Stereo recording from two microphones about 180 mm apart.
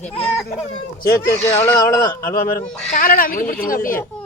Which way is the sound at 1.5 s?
10° left (ahead or behind).